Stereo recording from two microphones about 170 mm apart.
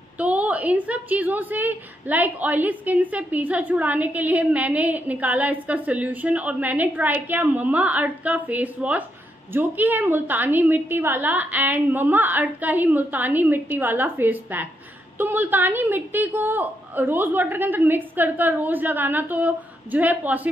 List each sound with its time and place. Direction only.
0.2 s a woman's voice: 10° right (ahead or behind)